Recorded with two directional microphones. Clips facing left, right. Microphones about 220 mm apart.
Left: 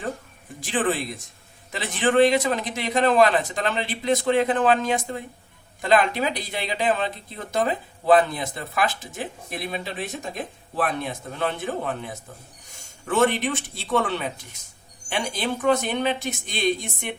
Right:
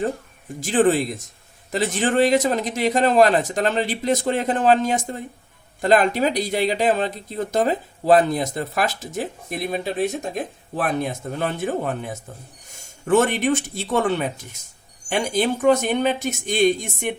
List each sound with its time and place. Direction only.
0.6 s speech: 40° right (ahead or behind)